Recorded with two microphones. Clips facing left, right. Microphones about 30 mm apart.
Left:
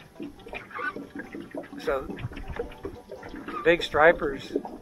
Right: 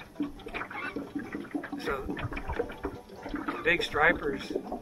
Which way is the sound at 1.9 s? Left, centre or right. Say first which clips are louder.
Left 6 dB; centre.